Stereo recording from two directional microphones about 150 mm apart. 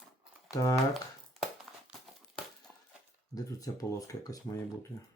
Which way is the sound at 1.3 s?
Centre (ahead or behind).